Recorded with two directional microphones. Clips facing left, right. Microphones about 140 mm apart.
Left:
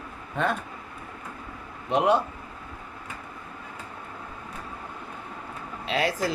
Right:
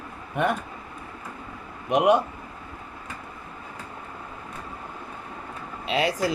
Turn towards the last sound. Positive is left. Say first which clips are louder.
# right 2 dB
turn(degrees=-15)  # may be behind; listen again after turning